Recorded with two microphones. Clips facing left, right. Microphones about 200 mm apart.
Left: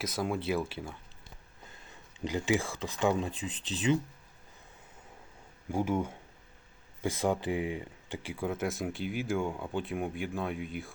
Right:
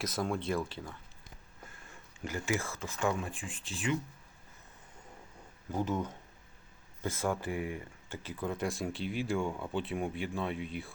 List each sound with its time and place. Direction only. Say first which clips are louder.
0.0 s speech: left 1 dB; centre (ahead or behind)
2.3 s speech: left 5 dB; 20° left (ahead or behind)
5.6 s speech: left 3 dB; 10° left (ahead or behind)